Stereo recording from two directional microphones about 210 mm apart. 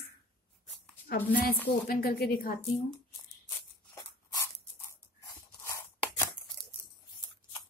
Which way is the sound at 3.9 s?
15° left (ahead or behind).